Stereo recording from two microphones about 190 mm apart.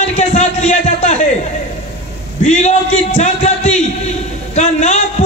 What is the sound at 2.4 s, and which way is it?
A man's voice, 35° left (ahead or behind).